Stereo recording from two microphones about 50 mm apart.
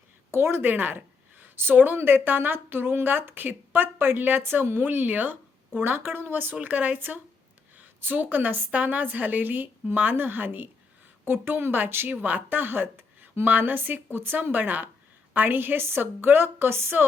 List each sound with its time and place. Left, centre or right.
0.3 s a woman's voice: right
0.6 s a woman's voice: right
4.9 s a woman's voice: right
13.4 s a woman's voice: right